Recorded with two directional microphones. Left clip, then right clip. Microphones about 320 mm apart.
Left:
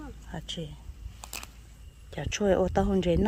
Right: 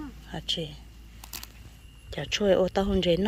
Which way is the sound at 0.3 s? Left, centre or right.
Centre.